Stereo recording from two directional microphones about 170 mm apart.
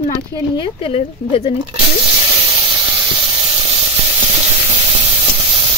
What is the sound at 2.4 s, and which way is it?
Steam, 30° right (ahead or behind).